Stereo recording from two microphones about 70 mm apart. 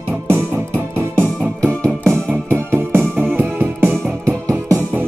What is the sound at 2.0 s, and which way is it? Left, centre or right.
Music, right.